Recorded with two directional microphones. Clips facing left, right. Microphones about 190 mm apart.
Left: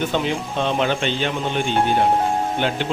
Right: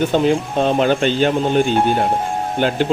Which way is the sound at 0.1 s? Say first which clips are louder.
Right 7 dB; 40° right (ahead or behind).